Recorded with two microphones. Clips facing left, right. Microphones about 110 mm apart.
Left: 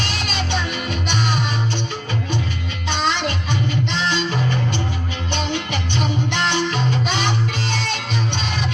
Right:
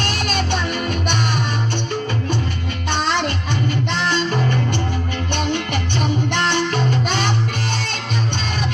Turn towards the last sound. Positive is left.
turn(degrees=-50)  # may be behind; listen again after turning